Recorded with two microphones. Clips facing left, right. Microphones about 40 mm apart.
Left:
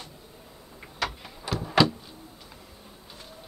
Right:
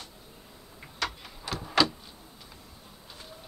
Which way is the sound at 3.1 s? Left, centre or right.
Centre.